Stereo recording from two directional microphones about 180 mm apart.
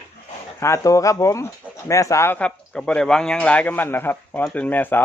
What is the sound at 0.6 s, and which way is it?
Speech, 15° left (ahead or behind).